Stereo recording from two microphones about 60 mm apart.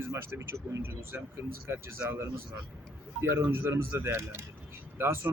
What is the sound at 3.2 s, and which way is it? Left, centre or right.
Speech, right.